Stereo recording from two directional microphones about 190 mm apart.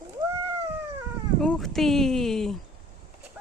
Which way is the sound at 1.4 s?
Centre (ahead or behind).